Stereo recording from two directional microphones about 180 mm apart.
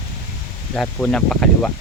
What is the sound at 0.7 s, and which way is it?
Speech, 5° left (ahead or behind).